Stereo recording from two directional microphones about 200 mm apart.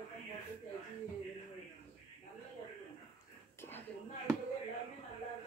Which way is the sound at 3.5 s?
10° left (ahead or behind).